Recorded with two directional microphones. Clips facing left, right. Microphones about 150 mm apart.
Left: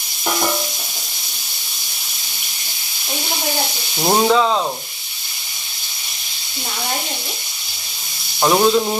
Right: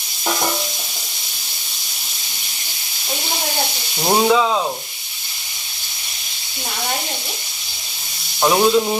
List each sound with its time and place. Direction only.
4.0 s speech: 5° left (ahead or behind)
8.4 s speech: centre (ahead or behind)